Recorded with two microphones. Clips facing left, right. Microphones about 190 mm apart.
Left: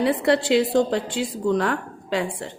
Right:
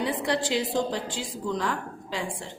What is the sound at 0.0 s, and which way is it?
A woman's voice, 65° left (ahead or behind).